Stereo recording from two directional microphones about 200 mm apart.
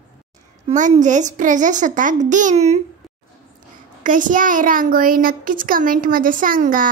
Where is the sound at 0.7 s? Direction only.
40° right (ahead or behind).